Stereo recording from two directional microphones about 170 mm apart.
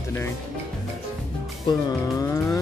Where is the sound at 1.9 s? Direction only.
20° left (ahead or behind).